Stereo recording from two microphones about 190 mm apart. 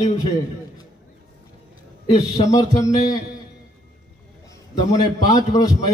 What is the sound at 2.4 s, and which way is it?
Speech, 20° left (ahead or behind).